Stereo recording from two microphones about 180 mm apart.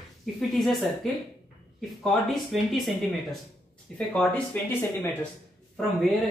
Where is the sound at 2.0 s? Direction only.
Centre (ahead or behind).